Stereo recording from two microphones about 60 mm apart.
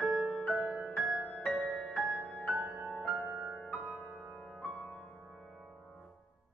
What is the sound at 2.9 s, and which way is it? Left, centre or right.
Music, centre.